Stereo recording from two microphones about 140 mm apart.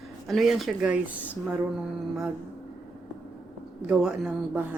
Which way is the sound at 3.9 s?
5° right (ahead or behind).